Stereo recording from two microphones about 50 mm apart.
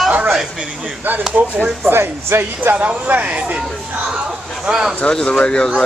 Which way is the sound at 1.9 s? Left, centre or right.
Right.